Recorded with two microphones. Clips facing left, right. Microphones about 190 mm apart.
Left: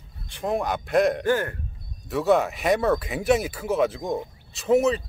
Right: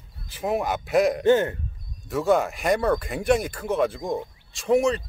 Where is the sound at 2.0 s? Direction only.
Centre (ahead or behind).